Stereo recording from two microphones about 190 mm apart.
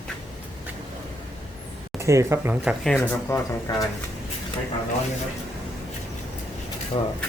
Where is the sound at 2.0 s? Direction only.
15° right (ahead or behind).